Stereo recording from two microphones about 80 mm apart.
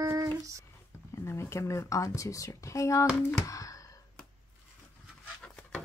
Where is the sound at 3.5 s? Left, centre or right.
Left.